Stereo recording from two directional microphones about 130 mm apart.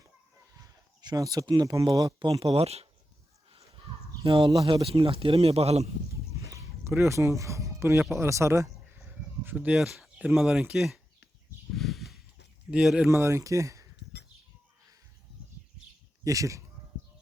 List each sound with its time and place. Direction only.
0.5 s speech: 25° right (ahead or behind)
2.4 s a man's voice: 50° right (ahead or behind)
4.3 s a man's voice: 45° right (ahead or behind)
6.3 s bow-wow: 25° right (ahead or behind)
8.1 s speech: 20° right (ahead or behind); by 11.0 s 5° right (ahead or behind)
11.7 s a sound: centre (ahead or behind)
12.7 s speech: 5° right (ahead or behind)
13.1 s speech: 20° right (ahead or behind)
16.2 s speech: 25° right (ahead or behind)